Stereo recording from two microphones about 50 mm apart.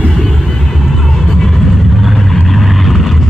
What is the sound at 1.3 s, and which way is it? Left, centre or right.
Vehicle, centre.